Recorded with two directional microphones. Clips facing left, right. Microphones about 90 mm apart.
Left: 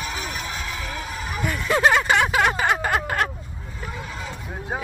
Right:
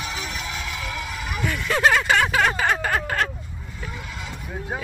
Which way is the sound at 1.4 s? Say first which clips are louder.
Even; 30° left (ahead or behind).